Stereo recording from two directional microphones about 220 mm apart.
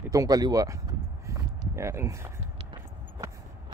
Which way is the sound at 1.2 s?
15° right (ahead or behind).